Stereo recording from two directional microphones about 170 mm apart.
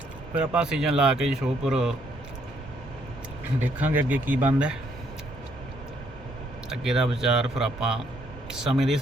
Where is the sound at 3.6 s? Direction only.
10° right (ahead or behind).